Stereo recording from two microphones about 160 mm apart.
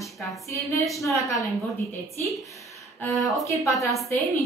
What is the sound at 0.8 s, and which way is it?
A woman's voice, centre (ahead or behind).